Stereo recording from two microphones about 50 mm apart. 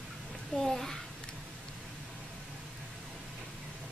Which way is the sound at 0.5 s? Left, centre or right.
Centre.